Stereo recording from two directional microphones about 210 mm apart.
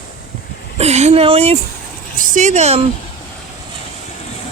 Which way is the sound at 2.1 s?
40° right (ahead or behind).